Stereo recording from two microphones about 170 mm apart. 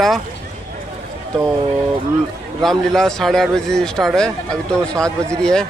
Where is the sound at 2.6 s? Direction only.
Centre (ahead or behind).